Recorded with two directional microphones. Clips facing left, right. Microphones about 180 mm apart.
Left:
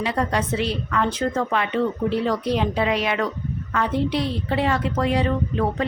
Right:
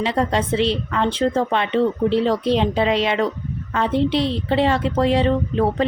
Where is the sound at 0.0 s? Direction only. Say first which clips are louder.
Right 3 dB; 25° right (ahead or behind).